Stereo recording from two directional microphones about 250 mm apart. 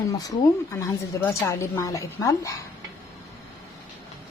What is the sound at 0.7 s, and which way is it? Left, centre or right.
A woman's voice, centre.